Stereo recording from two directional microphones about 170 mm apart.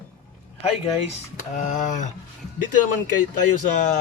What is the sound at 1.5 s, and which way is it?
Speech, 45° left (ahead or behind).